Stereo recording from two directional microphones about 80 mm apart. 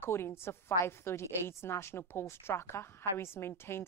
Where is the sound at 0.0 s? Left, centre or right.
Left.